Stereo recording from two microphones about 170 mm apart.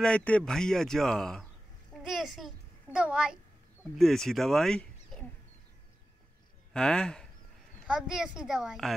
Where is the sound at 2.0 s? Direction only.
Centre (ahead or behind).